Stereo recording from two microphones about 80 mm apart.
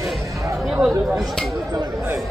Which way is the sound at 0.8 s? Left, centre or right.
Centre.